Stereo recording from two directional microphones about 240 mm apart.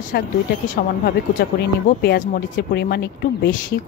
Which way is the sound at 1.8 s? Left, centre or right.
Left.